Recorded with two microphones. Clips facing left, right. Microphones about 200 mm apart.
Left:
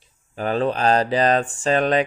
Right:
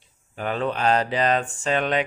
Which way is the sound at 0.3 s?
35° left (ahead or behind).